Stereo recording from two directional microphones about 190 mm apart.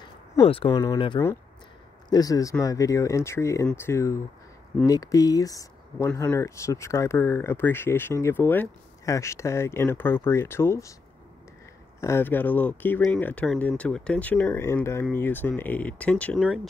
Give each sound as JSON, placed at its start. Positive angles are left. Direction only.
{"t": 0.5, "sound": "speech", "side_deg": 25}
{"t": 12.0, "sound": "speech", "side_deg": 10}